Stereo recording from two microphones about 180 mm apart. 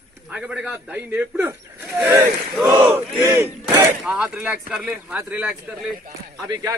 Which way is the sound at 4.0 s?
5° right (ahead or behind).